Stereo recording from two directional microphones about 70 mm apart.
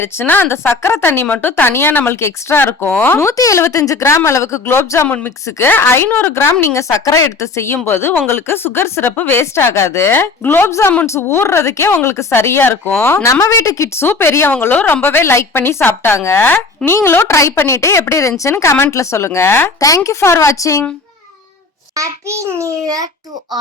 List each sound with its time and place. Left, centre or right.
0.0 s speech: left
3.2 s speech: left
5.0 s a woman's voice: left
6.1 s a woman's voice: left
6.3 s speech: left
10.7 s speech: left
13.2 s a woman's voice: left
21.9 s a child's voice: right